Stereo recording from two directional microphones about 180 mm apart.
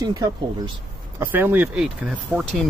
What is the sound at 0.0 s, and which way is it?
Speech, 20° right (ahead or behind).